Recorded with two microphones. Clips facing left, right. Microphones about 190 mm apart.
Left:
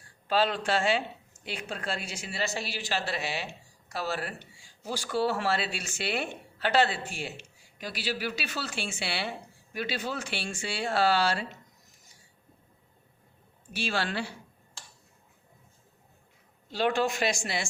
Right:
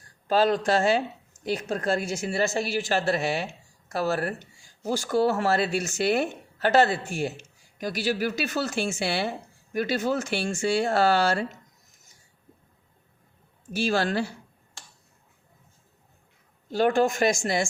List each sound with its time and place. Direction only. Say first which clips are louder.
0.3 s speech: right 5 dB; 40° right (ahead or behind)
13.7 s speech: right 7 dB; 45° right (ahead or behind)
16.6 s speech: right 5 dB; 45° right (ahead or behind)